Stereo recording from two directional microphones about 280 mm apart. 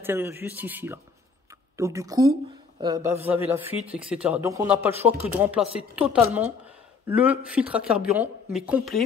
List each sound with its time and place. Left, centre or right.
0.0 s speech: centre
3.8 s speech: right
4.1 s speech: centre